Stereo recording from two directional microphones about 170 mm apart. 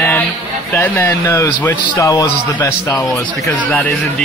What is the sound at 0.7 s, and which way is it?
A man's voice, 10° left (ahead or behind).